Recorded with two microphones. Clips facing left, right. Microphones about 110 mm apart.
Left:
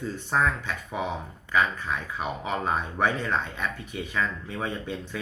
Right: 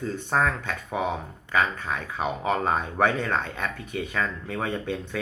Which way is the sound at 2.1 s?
40° right (ahead or behind).